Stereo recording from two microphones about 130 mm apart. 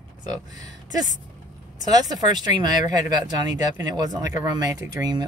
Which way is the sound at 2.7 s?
70° left (ahead or behind).